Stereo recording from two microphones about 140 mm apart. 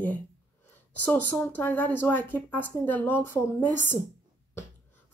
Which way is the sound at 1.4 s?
15° left (ahead or behind).